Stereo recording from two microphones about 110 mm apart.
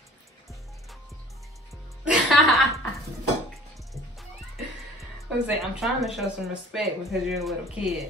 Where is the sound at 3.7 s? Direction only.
Centre (ahead or behind).